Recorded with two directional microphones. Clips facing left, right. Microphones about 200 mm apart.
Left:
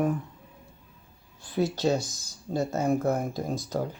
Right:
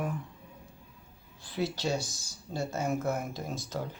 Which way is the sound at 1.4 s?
50° left (ahead or behind).